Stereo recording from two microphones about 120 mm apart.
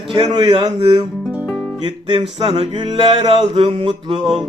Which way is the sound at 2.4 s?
50° right (ahead or behind).